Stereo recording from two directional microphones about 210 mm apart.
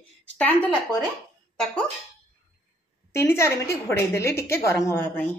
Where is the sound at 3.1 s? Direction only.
15° left (ahead or behind).